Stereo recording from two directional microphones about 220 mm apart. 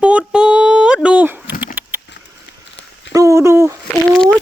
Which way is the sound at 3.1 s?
15° right (ahead or behind).